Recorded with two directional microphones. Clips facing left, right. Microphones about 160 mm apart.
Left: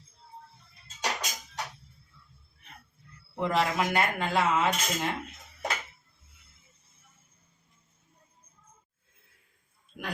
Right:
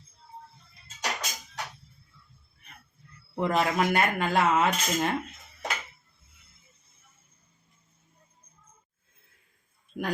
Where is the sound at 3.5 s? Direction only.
50° right (ahead or behind).